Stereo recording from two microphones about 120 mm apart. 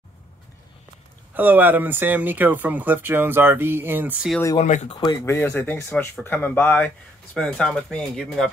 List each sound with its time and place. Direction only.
1.3 s speech: 15° right (ahead or behind)
4.6 s speech: 90° left
4.8 s speech: 40° left (ahead or behind)
5.2 s speech: 15° left (ahead or behind)